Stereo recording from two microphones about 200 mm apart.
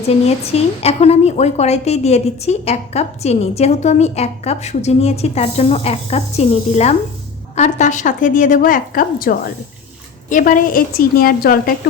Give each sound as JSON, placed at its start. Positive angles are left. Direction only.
{"t": 0.3, "sound": "a woman's voice", "side_deg": 30}